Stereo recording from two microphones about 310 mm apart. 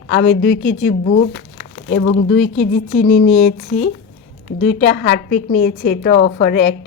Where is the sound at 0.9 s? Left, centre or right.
Left.